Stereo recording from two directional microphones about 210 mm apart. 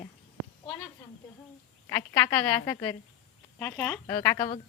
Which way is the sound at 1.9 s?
10° left (ahead or behind).